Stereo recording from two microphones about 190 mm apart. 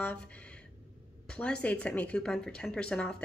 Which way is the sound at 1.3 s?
5° left (ahead or behind).